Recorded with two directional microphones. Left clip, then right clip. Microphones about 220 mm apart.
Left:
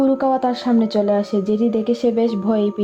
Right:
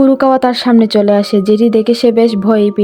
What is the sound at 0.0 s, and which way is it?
Speech, 40° right (ahead or behind).